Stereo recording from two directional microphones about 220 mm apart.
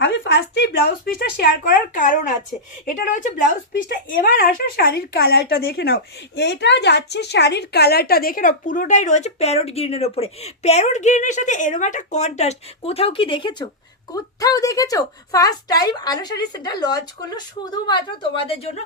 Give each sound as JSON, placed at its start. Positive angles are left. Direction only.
{"t": 0.0, "sound": "a woman's voice", "side_deg": 55}